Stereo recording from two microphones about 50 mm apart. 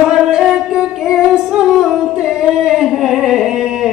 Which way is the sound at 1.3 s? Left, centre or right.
Centre.